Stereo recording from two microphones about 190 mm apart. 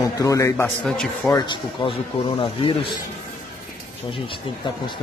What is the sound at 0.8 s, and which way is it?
Speech, 5° left (ahead or behind).